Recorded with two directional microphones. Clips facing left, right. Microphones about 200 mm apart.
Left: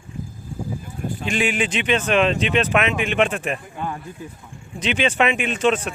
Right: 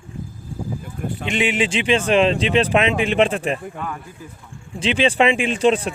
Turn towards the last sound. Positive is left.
turn(degrees=-30)  # may be behind; listen again after turning